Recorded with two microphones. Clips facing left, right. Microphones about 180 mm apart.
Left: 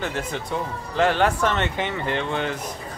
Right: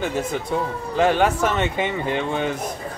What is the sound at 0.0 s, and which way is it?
Speech, 10° right (ahead or behind).